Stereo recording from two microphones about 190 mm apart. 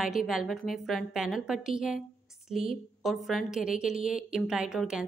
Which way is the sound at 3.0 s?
Centre (ahead or behind).